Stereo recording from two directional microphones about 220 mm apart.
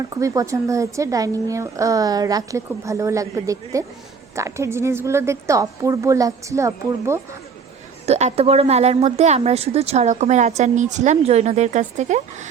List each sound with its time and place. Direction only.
0.1 s a woman's voice: 15° right (ahead or behind)
8.0 s a woman's voice: 30° right (ahead or behind)